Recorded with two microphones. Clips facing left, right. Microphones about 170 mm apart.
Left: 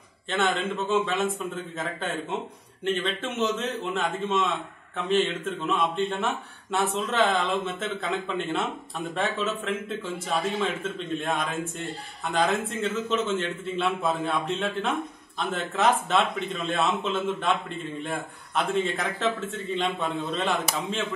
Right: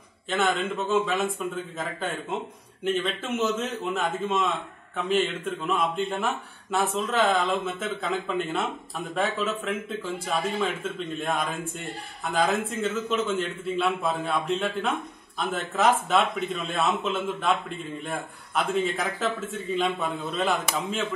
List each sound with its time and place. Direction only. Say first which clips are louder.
0.3 s a man's voice: right 1 dB; centre (ahead or behind)